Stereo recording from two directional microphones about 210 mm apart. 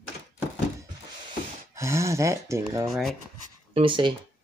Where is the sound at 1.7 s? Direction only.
15° right (ahead or behind).